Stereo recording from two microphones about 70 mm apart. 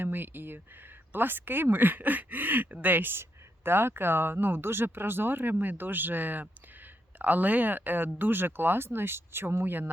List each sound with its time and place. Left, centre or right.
0.0 s speech: right